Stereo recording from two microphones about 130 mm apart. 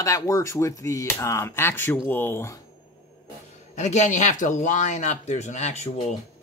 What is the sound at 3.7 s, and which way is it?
Speech, 60° left (ahead or behind).